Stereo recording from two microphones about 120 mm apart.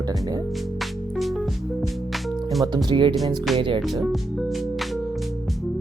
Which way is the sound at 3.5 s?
Centre (ahead or behind).